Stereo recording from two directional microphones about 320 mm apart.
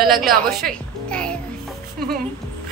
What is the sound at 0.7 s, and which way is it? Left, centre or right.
Music, centre.